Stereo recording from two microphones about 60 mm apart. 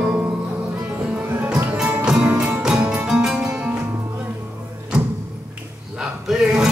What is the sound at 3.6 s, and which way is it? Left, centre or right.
Music, right.